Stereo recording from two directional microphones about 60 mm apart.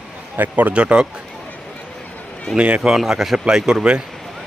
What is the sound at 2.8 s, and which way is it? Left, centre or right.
Speech, centre.